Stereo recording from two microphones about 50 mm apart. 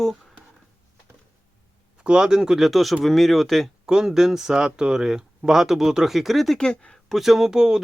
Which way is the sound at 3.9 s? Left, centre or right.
Centre.